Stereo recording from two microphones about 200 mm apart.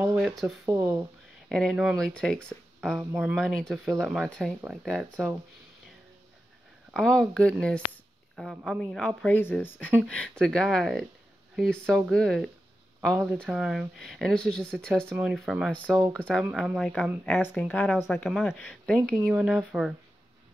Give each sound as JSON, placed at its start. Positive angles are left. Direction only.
{"t": 0.0, "sound": "a sound", "side_deg": -15}
{"t": 0.7, "sound": "speech", "side_deg": -15}
{"t": 1.5, "sound": "speech", "side_deg": 0}
{"t": 6.9, "sound": "speech", "side_deg": 5}
{"t": 15.0, "sound": "speech", "side_deg": -10}